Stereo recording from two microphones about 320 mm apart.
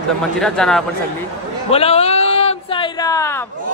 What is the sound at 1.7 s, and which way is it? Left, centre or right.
Speech, centre.